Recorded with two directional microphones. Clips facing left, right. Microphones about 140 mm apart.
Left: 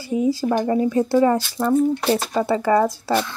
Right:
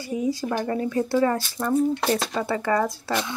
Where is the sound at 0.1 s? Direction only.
25° left (ahead or behind).